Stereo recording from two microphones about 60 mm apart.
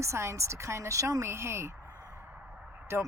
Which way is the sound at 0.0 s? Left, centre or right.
Right.